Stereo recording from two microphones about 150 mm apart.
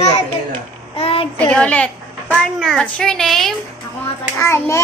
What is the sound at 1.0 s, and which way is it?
Child singing, 40° left (ahead or behind).